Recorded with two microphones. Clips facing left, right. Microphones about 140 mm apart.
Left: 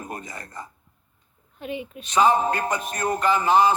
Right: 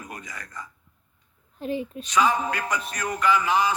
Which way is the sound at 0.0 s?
30° left (ahead or behind).